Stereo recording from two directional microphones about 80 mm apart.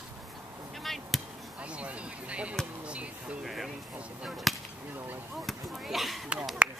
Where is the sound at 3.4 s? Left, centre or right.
Centre.